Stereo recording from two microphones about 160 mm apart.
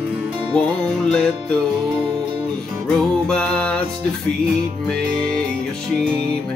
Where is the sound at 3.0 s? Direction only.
5° left (ahead or behind).